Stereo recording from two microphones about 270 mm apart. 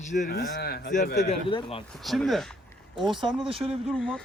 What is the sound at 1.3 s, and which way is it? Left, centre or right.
Speech, centre.